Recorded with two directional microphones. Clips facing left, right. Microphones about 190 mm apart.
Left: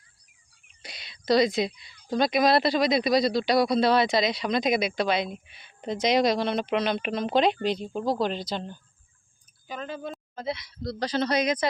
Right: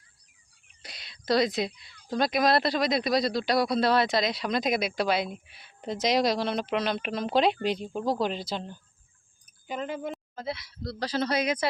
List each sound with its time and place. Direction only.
0.8 s speech: centre (ahead or behind)
9.6 s speech: 20° right (ahead or behind)
10.3 s speech: centre (ahead or behind)